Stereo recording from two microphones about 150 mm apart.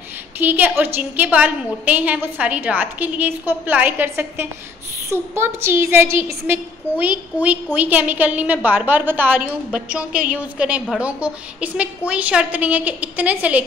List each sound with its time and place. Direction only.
0.4 s a woman's voice: 10° right (ahead or behind)